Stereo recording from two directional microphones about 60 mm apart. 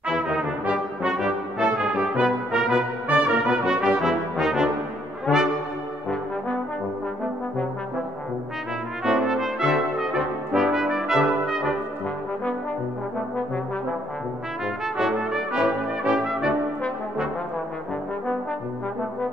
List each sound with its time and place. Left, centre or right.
0.1 s brass instrument: centre
3.1 s brass instrument: right
3.4 s brass instrument: centre
9.0 s brass instrument: centre
15.0 s brass instrument: centre